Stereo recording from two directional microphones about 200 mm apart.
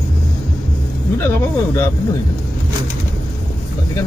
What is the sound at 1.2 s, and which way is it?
Snake, 10° left (ahead or behind).